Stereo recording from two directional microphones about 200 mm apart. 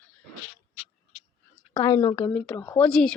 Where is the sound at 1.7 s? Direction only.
20° left (ahead or behind); by 3.1 s 5° left (ahead or behind).